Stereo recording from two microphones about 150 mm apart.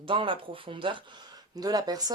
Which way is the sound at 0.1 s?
35° right (ahead or behind).